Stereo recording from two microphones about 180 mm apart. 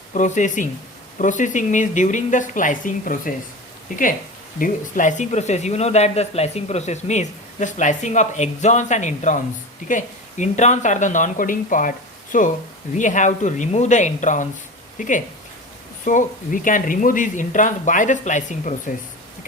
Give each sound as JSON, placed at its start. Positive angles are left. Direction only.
{"t": 0.1, "sound": "speech", "side_deg": 45}
{"t": 4.6, "sound": "speech", "side_deg": 45}